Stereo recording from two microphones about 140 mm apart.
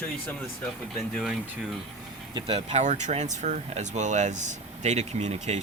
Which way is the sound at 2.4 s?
50° right (ahead or behind).